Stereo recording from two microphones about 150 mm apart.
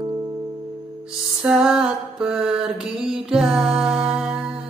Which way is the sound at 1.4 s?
5° right (ahead or behind).